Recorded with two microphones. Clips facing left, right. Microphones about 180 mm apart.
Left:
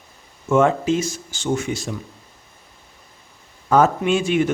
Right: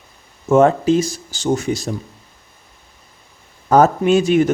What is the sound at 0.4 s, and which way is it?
Speech, 40° right (ahead or behind).